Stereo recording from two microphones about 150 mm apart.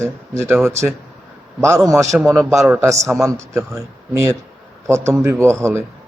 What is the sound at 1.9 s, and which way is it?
Speech, 20° right (ahead or behind).